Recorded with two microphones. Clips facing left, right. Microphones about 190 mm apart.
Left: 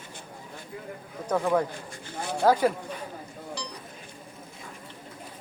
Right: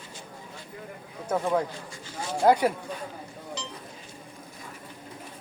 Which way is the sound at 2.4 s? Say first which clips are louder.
Right 1 dB; 15° right (ahead or behind).